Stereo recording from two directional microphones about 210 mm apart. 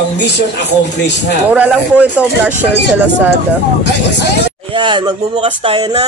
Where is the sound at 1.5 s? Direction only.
5° right (ahead or behind).